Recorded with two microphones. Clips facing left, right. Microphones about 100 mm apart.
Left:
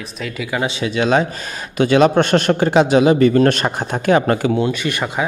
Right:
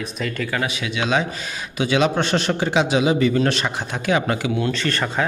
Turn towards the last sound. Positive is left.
turn(degrees=15)  # may be behind; listen again after turning